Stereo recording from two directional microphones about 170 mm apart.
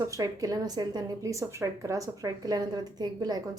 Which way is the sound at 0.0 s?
20° right (ahead or behind).